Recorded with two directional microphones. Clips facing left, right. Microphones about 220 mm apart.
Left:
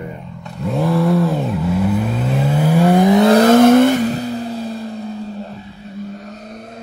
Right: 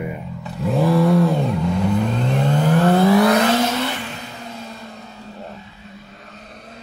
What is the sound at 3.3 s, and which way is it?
Vehicle, 45° left (ahead or behind).